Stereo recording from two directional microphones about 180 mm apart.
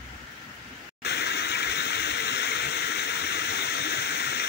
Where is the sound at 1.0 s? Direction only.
70° left (ahead or behind).